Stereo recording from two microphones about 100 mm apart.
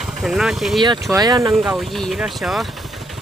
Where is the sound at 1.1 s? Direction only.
45° right (ahead or behind).